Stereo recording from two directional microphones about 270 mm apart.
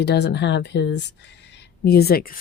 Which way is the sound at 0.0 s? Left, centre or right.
Left.